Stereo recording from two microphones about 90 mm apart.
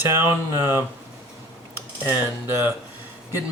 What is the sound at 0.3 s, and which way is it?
Speech, 25° right (ahead or behind).